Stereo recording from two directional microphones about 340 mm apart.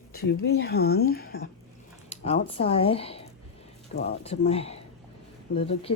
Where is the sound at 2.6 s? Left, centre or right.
Centre.